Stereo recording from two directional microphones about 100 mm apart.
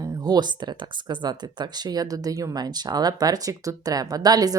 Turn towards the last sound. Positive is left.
turn(degrees=-40)  # may be behind; listen again after turning